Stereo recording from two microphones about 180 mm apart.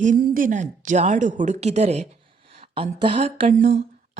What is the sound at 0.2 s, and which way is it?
Speech, 50° right (ahead or behind).